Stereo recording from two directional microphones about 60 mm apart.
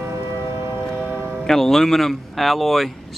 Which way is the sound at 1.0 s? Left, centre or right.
Right.